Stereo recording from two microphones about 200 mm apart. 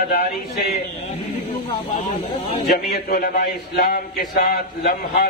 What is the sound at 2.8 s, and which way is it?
A man's voice, 45° left (ahead or behind).